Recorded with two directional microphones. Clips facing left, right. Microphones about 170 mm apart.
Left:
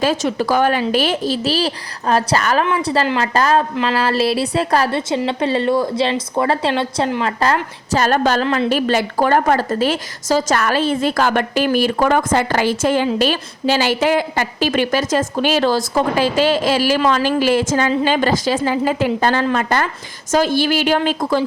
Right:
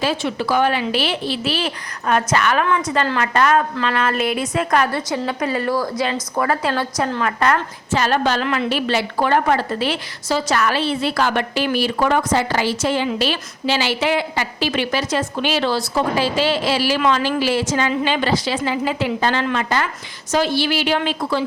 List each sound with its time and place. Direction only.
0.0 s a woman's voice: 45° left (ahead or behind)
8.0 s a woman's voice: 45° left (ahead or behind)